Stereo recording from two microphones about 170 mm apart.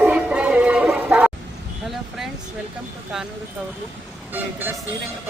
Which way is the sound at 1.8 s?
Centre (ahead or behind).